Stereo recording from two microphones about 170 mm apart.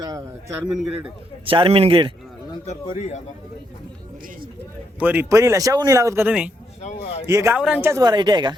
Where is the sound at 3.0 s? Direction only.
45° left (ahead or behind).